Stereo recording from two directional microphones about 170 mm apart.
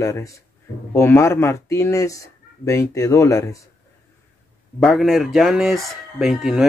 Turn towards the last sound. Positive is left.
turn(degrees=0)  # may be behind; listen again after turning